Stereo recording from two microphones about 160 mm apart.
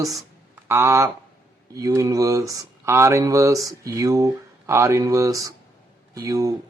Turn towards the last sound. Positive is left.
turn(degrees=-20)  # may be behind; listen again after turning